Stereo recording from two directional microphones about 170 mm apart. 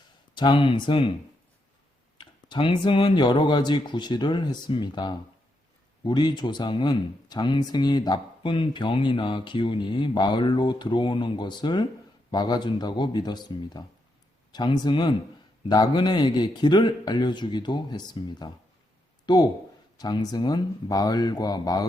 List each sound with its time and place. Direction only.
0.3 s speech: 30° left (ahead or behind)
2.1 s speech: 30° left (ahead or behind)